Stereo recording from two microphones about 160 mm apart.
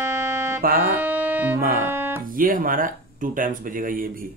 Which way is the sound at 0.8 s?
10° right (ahead or behind).